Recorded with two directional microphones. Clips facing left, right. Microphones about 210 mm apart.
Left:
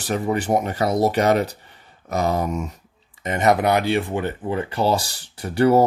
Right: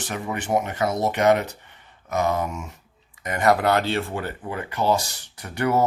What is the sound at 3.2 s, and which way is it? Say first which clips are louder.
Speech: left 2 dB; 25° left (ahead or behind).